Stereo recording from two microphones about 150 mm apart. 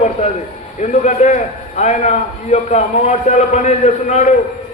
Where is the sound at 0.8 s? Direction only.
50° left (ahead or behind).